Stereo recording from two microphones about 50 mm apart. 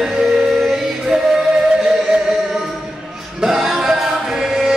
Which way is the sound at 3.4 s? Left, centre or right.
Centre.